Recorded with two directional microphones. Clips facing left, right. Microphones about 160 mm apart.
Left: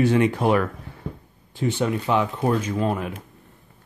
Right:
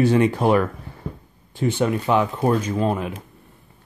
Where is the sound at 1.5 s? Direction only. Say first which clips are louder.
Right 2 dB; 50° right (ahead or behind); by 3.2 s 25° right (ahead or behind).